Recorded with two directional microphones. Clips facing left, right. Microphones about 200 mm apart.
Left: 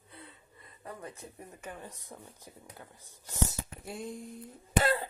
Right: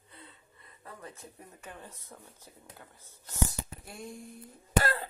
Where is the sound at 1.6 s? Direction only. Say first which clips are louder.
Left 3 dB; 10° left (ahead or behind).